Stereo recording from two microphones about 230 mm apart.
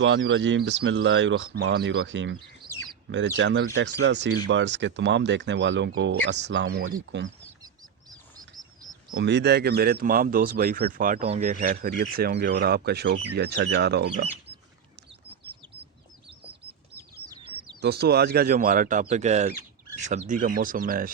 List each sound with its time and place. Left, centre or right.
0.0 s speech: right
9.1 s speech: right
17.3 s bird: centre
17.7 s speech: right